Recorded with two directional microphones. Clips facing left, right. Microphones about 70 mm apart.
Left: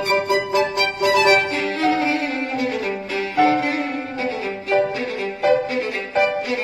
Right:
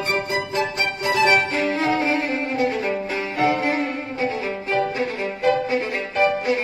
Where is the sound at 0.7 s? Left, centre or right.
Right.